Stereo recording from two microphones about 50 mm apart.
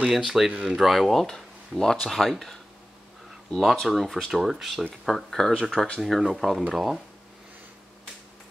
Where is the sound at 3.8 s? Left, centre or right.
Centre.